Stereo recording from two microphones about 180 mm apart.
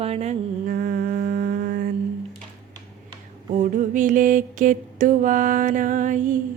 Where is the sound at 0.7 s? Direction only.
55° right (ahead or behind).